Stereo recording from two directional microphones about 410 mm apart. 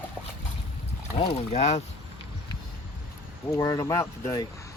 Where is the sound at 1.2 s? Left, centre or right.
Centre.